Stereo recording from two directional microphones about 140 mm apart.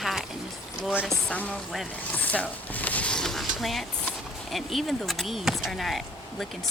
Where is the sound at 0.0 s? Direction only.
Centre (ahead or behind).